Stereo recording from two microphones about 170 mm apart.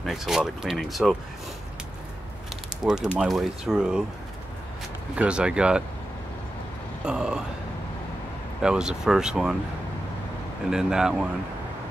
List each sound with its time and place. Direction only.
0.0 s speech: centre (ahead or behind)
2.8 s speech: centre (ahead or behind)
5.1 s speech: 5° right (ahead or behind)
7.1 s speech: 5° right (ahead or behind)
8.6 s speech: 5° right (ahead or behind)
10.7 s speech: 5° right (ahead or behind)